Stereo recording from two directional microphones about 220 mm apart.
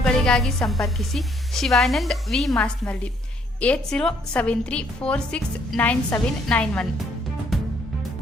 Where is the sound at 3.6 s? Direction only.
5° left (ahead or behind).